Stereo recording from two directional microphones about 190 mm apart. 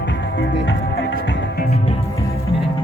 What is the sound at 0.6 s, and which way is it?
Music, 65° left (ahead or behind).